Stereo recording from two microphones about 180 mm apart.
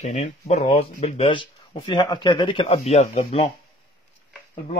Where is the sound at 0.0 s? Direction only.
40° left (ahead or behind).